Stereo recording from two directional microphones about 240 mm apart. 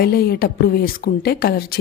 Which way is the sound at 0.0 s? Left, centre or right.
Left.